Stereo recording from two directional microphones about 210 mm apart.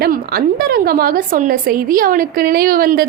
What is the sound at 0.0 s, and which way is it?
A woman's voice, 45° right (ahead or behind).